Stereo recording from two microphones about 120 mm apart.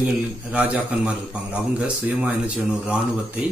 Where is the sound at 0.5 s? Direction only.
10° right (ahead or behind).